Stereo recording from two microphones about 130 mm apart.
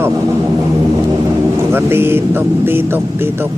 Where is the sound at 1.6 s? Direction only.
20° right (ahead or behind).